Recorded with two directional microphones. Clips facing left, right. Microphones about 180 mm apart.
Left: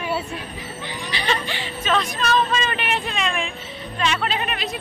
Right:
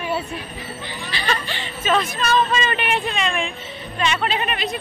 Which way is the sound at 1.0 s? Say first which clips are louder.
Left 1 dB; 20° left (ahead or behind).